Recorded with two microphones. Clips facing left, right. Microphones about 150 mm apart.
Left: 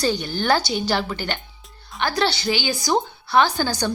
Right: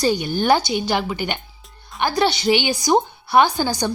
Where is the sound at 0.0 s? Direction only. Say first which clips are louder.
Right 3 dB; 15° right (ahead or behind).